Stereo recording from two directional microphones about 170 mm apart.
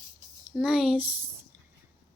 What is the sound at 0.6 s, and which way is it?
Speech, 5° right (ahead or behind).